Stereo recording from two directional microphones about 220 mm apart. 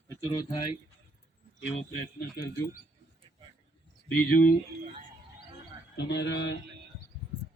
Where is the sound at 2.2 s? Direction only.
45° left (ahead or behind).